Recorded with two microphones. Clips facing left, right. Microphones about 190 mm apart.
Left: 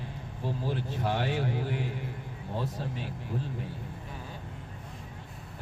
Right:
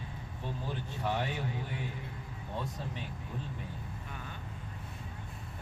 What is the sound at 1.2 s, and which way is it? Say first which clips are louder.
Speech: left 5 dB; 90° left.